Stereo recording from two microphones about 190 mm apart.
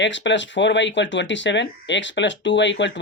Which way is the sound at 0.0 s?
70° left (ahead or behind).